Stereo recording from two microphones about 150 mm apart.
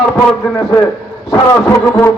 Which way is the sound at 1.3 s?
20° left (ahead or behind).